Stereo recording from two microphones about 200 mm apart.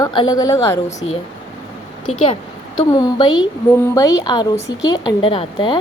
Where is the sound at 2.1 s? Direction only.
30° left (ahead or behind).